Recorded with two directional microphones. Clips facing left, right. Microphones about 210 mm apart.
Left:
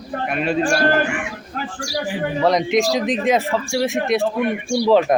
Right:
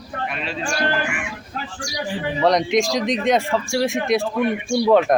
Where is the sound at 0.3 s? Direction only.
50° left (ahead or behind).